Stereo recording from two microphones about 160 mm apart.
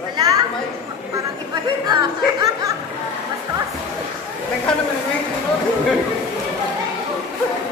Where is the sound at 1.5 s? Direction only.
25° right (ahead or behind).